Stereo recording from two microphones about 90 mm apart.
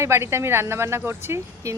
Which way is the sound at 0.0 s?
30° right (ahead or behind).